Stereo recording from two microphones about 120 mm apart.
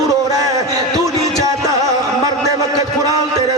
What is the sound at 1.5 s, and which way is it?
Music, 30° right (ahead or behind).